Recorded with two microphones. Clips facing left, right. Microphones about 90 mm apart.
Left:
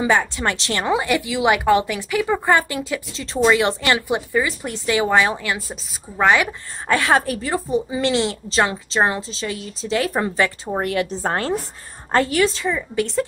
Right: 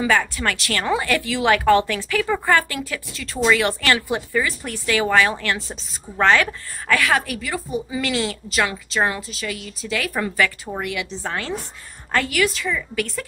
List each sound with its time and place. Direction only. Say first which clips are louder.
0.0 s a woman's voice: left 1 dB; 20° left (ahead or behind)
6.9 s a woman's voice: left 2 dB; 30° left (ahead or behind)